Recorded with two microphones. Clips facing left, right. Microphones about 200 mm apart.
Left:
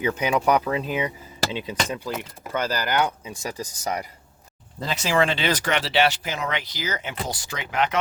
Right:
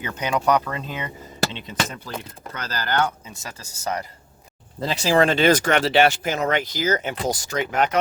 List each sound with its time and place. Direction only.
0.0 s speech: 10° left (ahead or behind)
4.9 s speech: 35° right (ahead or behind)